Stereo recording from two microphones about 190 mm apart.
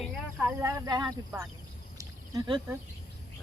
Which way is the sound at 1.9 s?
20° right (ahead or behind).